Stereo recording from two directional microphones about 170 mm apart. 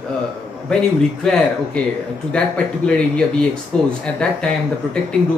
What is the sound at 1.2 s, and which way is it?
Speech, 5° left (ahead or behind).